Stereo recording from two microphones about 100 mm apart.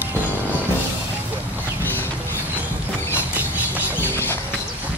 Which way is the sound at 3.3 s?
15° right (ahead or behind).